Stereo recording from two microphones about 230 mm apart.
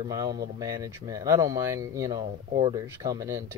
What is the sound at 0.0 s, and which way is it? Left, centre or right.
Speech, centre.